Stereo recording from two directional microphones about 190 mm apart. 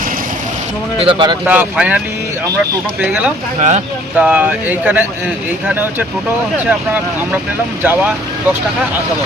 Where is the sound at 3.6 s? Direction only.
40° right (ahead or behind).